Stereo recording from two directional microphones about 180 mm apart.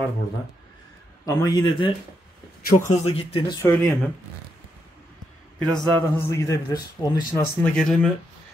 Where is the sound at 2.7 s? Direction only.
40° left (ahead or behind).